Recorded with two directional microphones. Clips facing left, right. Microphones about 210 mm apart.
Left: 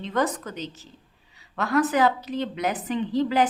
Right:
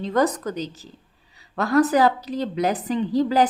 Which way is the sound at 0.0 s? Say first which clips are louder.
Right 5 dB; 40° right (ahead or behind).